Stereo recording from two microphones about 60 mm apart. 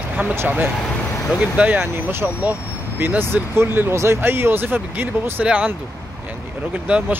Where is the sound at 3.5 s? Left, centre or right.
Right.